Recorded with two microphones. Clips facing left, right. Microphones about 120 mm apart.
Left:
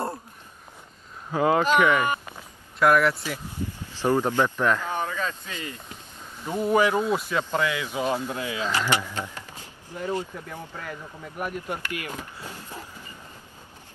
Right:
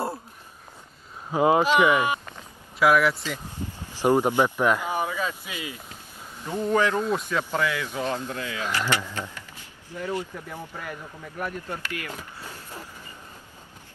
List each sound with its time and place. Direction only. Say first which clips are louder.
1.3 s speech: right 1 dB; 20° right (ahead or behind); by 3.2 s centre (ahead or behind)
4.0 s speech: right 2 dB; 15° right (ahead or behind)
6.4 s speech: left 2 dB; 15° left (ahead or behind)
10.5 s speech: even; 10° right (ahead or behind)
11.3 s speech: left 1 dB; 15° left (ahead or behind)